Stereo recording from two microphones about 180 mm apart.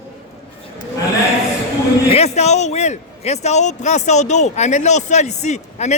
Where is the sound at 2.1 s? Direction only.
35° left (ahead or behind).